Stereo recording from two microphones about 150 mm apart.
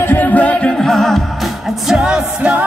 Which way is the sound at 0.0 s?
10° left (ahead or behind).